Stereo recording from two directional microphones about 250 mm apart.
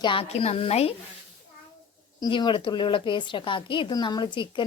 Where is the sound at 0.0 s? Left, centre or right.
Left.